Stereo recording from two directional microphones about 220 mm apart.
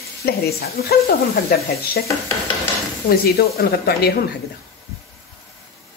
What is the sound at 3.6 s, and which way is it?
Speech, 45° left (ahead or behind).